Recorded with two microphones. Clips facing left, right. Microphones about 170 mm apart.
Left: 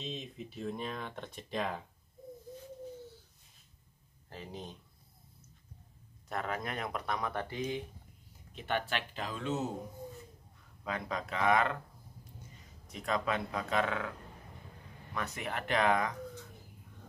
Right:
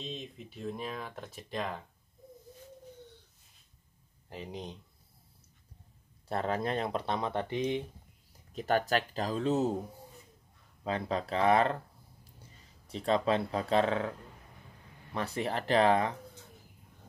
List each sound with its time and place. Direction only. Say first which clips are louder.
0.0 s speech: even; centre (ahead or behind)
4.3 s speech: right 3 dB; 15° right (ahead or behind)
6.2 s speech: right 5 dB; 30° right (ahead or behind)
8.5 s speech: right 6 dB; 40° right (ahead or behind)
10.8 s speech: right 5 dB; 30° right (ahead or behind)
12.8 s speech: right 5 dB; 30° right (ahead or behind)
15.1 s speech: right 5 dB; 30° right (ahead or behind)